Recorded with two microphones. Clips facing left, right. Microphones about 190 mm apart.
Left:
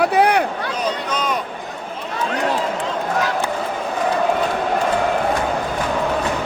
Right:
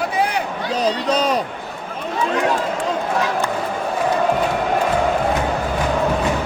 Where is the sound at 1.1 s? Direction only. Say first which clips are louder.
Right 4 dB; 35° right (ahead or behind).